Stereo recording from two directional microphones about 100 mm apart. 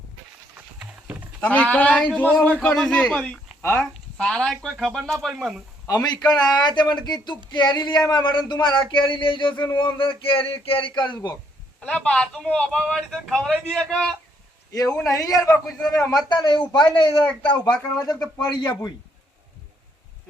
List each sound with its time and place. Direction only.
0.8 s a sound: 10° right (ahead or behind)
1.4 s a man's voice: 15° left (ahead or behind)
5.9 s speech: 45° left (ahead or behind)
11.8 s a man's voice: 10° left (ahead or behind)
14.7 s a man's voice: 35° left (ahead or behind)
16.3 s speech: 50° left (ahead or behind)